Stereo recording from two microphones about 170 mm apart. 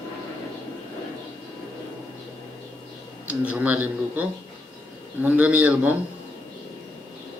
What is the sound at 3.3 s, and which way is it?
A man's voice, 10° right (ahead or behind).